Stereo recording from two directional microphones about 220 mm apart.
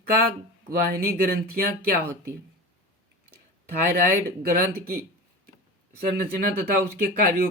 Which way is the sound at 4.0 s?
40° right (ahead or behind).